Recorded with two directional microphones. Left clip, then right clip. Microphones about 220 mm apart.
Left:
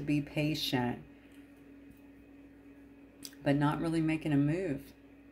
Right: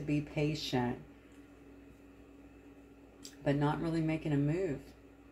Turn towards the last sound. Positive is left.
turn(degrees=35)  # may be behind; listen again after turning